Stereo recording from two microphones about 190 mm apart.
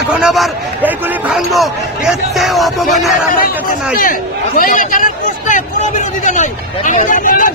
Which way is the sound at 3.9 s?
45° left (ahead or behind).